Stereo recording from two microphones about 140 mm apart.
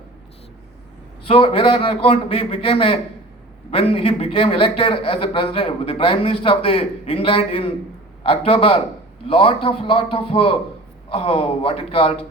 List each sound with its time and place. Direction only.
1.2 s a man's voice: 40° left (ahead or behind)